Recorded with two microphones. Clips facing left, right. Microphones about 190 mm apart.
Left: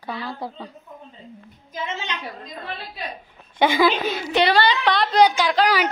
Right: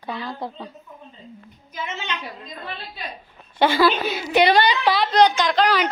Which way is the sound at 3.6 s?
15° left (ahead or behind).